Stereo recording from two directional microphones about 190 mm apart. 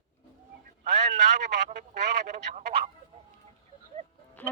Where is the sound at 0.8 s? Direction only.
40° right (ahead or behind).